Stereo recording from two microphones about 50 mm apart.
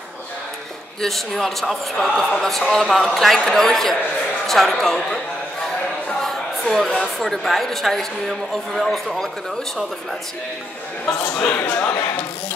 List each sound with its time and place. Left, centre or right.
1.0 s a woman's voice: centre
6.2 s a sound: centre
7.0 s a woman's voice: centre
11.3 s a man's voice: left